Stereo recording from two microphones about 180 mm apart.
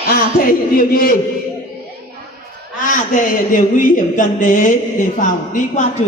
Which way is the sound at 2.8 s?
45° left (ahead or behind).